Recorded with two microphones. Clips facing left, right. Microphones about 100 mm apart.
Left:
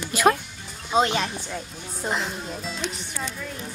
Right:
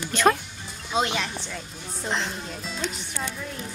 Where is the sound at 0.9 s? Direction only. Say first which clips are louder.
Left 4 dB; 40° left (ahead or behind).